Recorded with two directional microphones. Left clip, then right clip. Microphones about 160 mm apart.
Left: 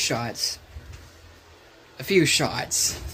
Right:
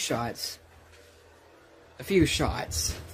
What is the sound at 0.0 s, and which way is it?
Speech, 15° right (ahead or behind).